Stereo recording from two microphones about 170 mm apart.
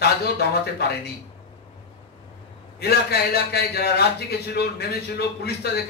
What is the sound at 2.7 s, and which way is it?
A man's voice, 70° left (ahead or behind).